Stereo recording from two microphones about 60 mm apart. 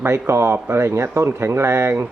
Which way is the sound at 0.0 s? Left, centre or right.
Right.